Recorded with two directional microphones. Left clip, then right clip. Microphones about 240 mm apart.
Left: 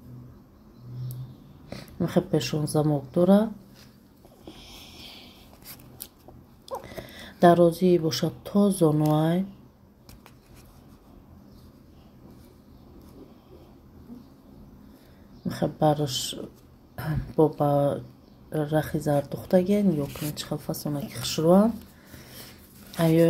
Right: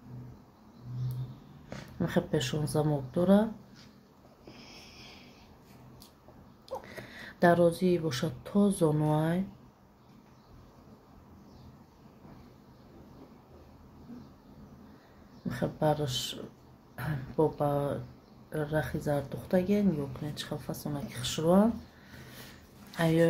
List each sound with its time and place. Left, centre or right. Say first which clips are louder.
1.7 s speech: left 4 dB; centre
4.6 s a sound: left 5 dB; left
6.9 s speech: left 4 dB; centre
15.4 s speech: left 6 dB; centre
22.8 s speech: left 6 dB; centre